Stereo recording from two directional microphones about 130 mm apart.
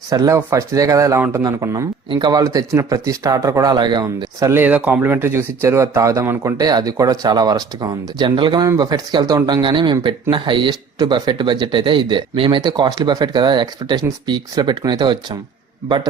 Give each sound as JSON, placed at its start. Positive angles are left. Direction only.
{"t": 0.1, "sound": "speech", "side_deg": -25}
{"t": 2.0, "sound": "speech", "side_deg": -35}
{"t": 4.6, "sound": "speech", "side_deg": -15}